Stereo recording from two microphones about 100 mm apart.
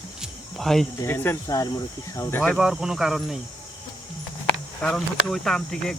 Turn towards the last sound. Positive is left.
turn(degrees=5)  # may be behind; listen again after turning